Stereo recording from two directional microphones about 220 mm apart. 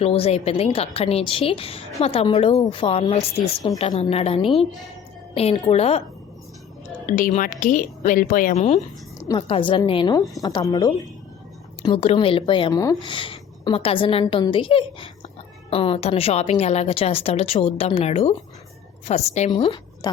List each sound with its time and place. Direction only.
0.0 s speech: 25° left (ahead or behind)
7.1 s speech: 35° left (ahead or behind)
9.1 s a woman's voice: 15° left (ahead or behind)